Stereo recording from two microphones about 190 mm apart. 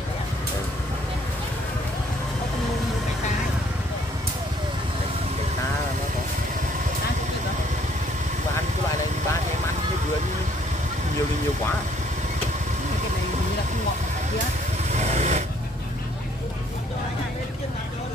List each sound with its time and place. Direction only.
14.9 s vehicle: 35° right (ahead or behind)